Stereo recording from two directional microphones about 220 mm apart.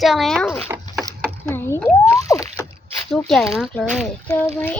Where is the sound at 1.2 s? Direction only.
10° left (ahead or behind).